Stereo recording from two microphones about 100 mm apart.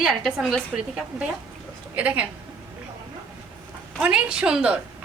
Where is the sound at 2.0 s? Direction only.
15° right (ahead or behind).